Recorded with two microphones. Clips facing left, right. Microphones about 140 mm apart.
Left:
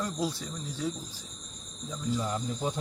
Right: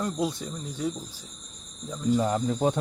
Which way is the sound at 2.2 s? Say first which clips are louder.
Right 7 dB; 60° right (ahead or behind).